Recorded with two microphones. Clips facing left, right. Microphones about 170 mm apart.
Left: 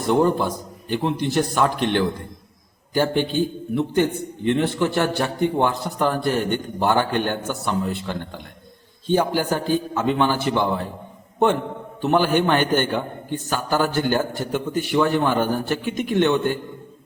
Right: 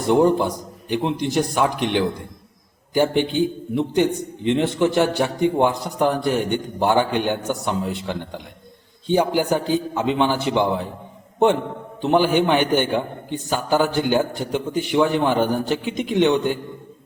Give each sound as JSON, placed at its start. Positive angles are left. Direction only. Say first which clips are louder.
{"t": 0.1, "sound": "a man's voice", "louder": "right 2 dB", "side_deg": -15}
{"t": 3.2, "sound": "a man's voice", "louder": "right 2 dB", "side_deg": -15}
{"t": 12.0, "sound": "a man's voice", "louder": "right 1 dB", "side_deg": -15}